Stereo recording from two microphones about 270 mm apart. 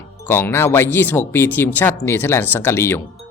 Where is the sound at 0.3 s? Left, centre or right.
Centre.